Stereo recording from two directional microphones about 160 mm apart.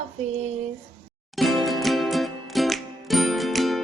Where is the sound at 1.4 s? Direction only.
Centre (ahead or behind).